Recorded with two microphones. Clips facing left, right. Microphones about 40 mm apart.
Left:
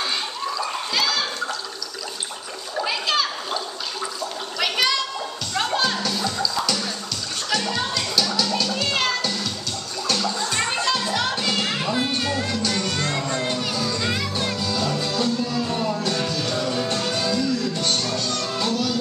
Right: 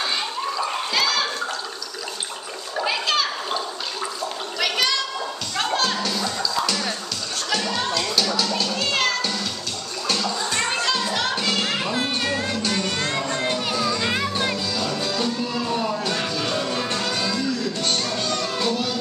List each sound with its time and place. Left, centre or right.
0.9 s water: centre
2.7 s splash: centre
4.6 s gargling: centre
5.5 s music: centre; by 16.8 s right
16.8 s music: centre